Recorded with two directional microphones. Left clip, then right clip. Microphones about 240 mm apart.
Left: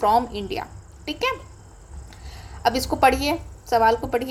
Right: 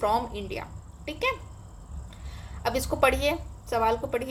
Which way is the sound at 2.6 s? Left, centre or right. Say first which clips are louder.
Left 6 dB; centre.